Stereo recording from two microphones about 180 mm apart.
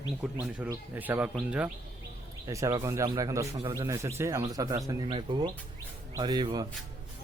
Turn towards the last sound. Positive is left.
turn(degrees=-20)  # may be behind; listen again after turning